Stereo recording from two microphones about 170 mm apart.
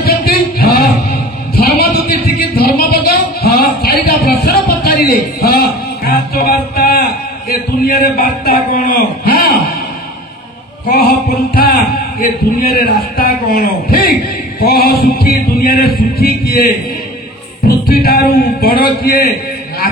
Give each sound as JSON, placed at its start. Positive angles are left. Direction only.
{"t": 0.0, "sound": "singing", "side_deg": 60}
{"t": 1.5, "sound": "a sound", "side_deg": 60}
{"t": 2.0, "sound": "singing", "side_deg": 65}
{"t": 3.4, "sound": "a sound", "side_deg": 65}
{"t": 10.9, "sound": "chant", "side_deg": 60}
{"t": 12.2, "sound": "music", "side_deg": 60}
{"t": 17.6, "sound": "music", "side_deg": 65}